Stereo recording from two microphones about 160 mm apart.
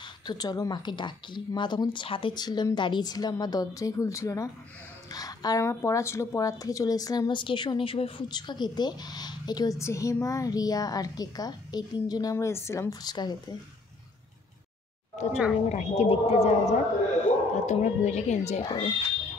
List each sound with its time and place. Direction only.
0.0 s speech: 25° left (ahead or behind)
15.2 s a woman's voice: 45° left (ahead or behind)
18.6 s speech: 30° left (ahead or behind)